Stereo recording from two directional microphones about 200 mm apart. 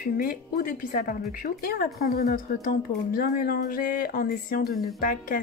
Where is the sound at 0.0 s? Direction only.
45° left (ahead or behind).